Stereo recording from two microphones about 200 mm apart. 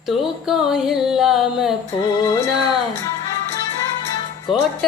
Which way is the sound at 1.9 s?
20° left (ahead or behind).